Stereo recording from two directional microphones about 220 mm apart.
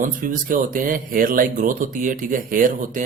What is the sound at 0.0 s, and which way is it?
Speech, 35° right (ahead or behind).